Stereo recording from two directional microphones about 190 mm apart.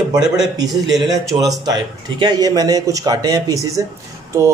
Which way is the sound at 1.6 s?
20° right (ahead or behind).